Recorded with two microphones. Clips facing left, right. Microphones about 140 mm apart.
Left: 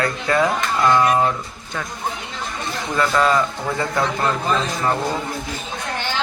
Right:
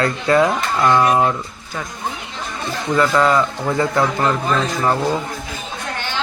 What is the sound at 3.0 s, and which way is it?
Speech, 20° right (ahead or behind).